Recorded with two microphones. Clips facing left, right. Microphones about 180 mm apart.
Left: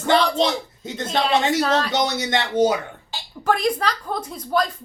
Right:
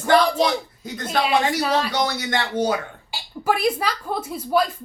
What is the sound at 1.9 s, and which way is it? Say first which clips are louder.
Speech: left 2 dB; 20° left (ahead or behind).